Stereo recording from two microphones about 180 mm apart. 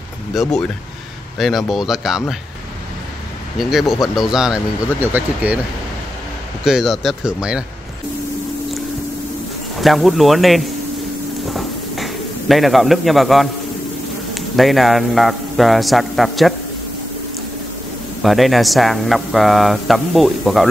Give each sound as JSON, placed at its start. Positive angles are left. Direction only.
{"t": 0.3, "sound": "speech", "side_deg": 0}
{"t": 3.5, "sound": "speech", "side_deg": 0}
{"t": 6.6, "sound": "speech", "side_deg": 0}
{"t": 9.8, "sound": "speech", "side_deg": 0}
{"t": 11.5, "sound": "bird", "side_deg": 0}
{"t": 14.3, "sound": "speech", "side_deg": 0}
{"t": 18.2, "sound": "speech", "side_deg": 0}